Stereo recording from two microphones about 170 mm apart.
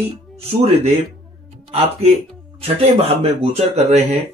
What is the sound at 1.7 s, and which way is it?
Speech, 40° right (ahead or behind).